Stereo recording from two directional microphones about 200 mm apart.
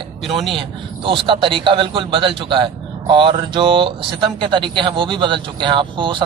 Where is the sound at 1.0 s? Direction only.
25° right (ahead or behind).